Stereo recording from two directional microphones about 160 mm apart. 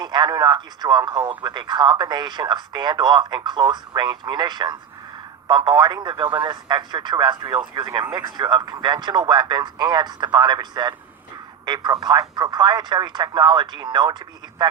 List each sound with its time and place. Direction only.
0.0 s speech: 25° right (ahead or behind)